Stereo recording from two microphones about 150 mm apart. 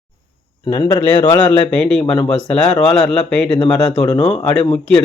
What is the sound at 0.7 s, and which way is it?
Speech, 30° left (ahead or behind).